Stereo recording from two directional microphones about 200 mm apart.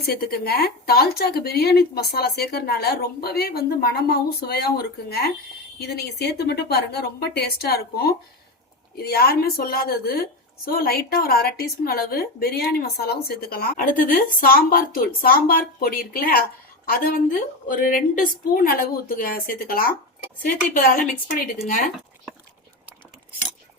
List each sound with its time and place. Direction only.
0.0 s a woman's voice: 50° left (ahead or behind)